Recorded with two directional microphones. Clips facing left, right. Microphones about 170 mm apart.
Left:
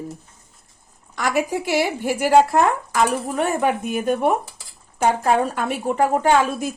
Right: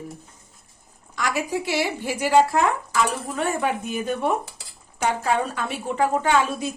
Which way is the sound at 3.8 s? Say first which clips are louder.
Left 5 dB; 55° left (ahead or behind).